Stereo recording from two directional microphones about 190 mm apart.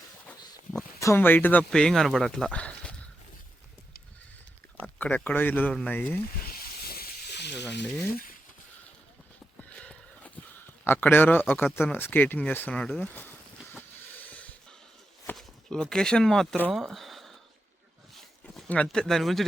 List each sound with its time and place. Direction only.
0.3 s speech: 5° left (ahead or behind)
4.8 s speech: 10° left (ahead or behind)
6.5 s snake: 55° left (ahead or behind)
9.6 s a sound: 5° left (ahead or behind)
15.3 s speech: 5° left (ahead or behind)
18.1 s a sound: 5° left (ahead or behind)